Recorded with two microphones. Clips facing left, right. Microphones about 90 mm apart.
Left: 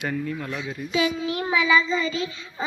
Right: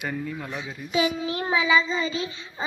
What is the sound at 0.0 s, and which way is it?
Speech, 10° right (ahead or behind).